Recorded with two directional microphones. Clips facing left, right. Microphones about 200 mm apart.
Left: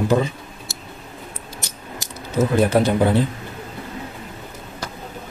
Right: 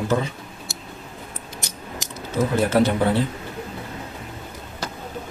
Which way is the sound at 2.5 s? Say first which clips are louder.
Left 1 dB; 15° left (ahead or behind).